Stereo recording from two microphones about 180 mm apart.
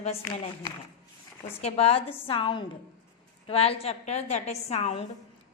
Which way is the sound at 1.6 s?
35° left (ahead or behind).